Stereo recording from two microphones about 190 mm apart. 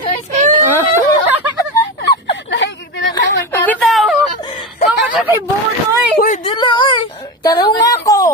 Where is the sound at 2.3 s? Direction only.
70° left (ahead or behind).